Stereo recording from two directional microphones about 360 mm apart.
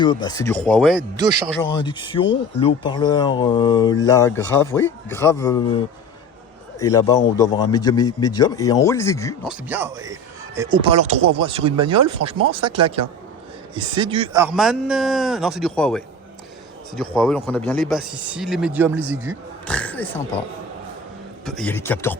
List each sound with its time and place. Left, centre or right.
0.0 s speech: centre
1.7 s a man's voice: centre
17.2 s speech: centre
21.4 s speech: centre